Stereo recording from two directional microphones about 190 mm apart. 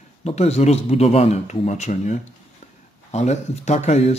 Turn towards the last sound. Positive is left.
turn(degrees=35)  # may be behind; listen again after turning